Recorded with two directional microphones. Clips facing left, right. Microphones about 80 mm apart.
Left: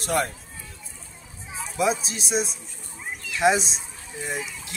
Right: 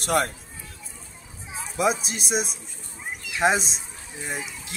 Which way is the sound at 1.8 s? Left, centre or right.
Right.